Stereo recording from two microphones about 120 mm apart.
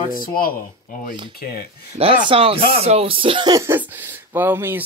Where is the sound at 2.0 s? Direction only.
50° right (ahead or behind).